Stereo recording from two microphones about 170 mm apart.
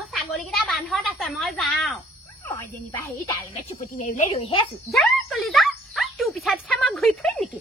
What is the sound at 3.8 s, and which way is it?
Speech, 45° left (ahead or behind).